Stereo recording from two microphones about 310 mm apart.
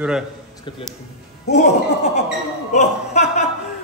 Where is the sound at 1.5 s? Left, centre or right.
Left.